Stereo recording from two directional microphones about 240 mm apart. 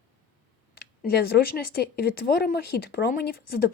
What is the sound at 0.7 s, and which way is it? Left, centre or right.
Speech, left.